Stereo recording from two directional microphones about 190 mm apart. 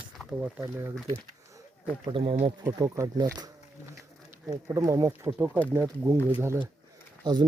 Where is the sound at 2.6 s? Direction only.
15° right (ahead or behind).